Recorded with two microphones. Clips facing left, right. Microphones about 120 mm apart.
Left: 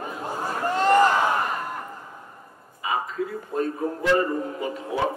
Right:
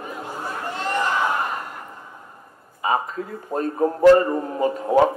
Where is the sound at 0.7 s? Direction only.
40° left (ahead or behind).